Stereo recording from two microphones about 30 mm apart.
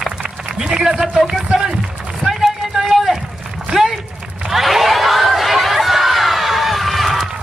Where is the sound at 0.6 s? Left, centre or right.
Centre.